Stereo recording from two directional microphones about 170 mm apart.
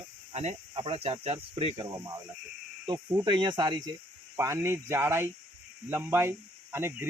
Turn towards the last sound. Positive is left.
turn(degrees=-15)  # may be behind; listen again after turning